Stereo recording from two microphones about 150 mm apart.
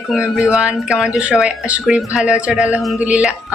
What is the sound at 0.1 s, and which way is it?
A woman's voice, 5° right (ahead or behind).